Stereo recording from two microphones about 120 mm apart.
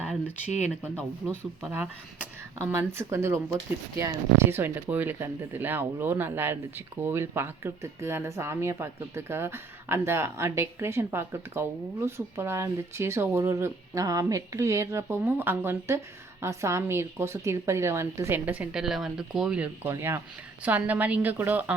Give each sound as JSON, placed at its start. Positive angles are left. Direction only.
{"t": 1.3, "sound": "speech", "side_deg": -15}